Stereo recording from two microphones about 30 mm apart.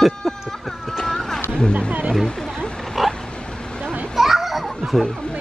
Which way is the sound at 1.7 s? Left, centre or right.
Right.